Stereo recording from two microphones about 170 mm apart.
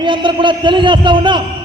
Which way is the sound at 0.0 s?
30° right (ahead or behind).